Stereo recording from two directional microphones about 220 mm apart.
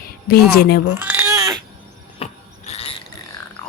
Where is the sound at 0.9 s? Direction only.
10° right (ahead or behind).